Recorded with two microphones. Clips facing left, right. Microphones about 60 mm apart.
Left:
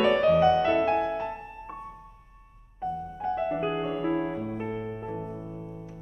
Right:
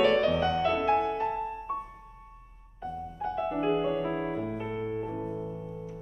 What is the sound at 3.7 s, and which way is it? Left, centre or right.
Music, centre.